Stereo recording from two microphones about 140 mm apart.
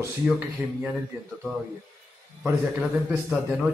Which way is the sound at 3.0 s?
10° right (ahead or behind).